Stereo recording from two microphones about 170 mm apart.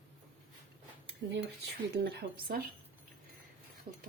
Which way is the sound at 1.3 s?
80° right.